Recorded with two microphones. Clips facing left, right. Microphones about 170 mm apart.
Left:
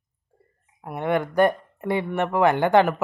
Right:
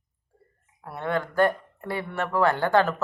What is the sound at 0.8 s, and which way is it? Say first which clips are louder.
Speech: left 4 dB; 15° left (ahead or behind).